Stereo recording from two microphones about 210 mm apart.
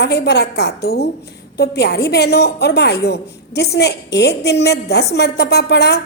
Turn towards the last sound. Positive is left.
turn(degrees=55)  # may be behind; listen again after turning